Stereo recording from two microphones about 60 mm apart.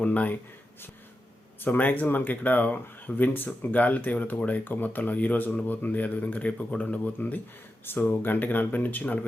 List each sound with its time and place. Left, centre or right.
0.0 s speech: left
1.6 s speech: left